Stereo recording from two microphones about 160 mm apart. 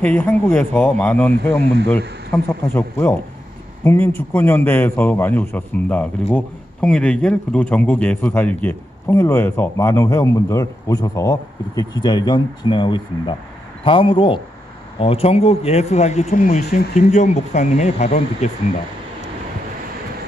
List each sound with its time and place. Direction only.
0.0 s a man's voice: 10° left (ahead or behind)
1.6 s speech: 90° right
1.9 s a man's voice: 10° left (ahead or behind); by 18.5 s 45° left (ahead or behind)